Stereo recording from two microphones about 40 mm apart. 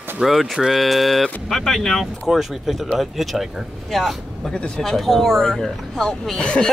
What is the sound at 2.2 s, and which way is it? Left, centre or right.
Speech, centre.